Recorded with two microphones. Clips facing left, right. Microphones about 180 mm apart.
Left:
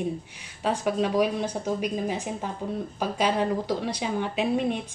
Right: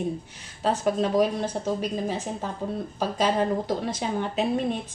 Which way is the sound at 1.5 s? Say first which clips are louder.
Even; 10° left (ahead or behind).